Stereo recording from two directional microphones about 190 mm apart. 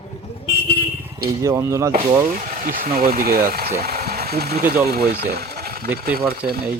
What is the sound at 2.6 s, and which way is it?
Speech, 45° right (ahead or behind).